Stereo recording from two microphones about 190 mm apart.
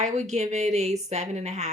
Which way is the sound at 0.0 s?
40° right (ahead or behind).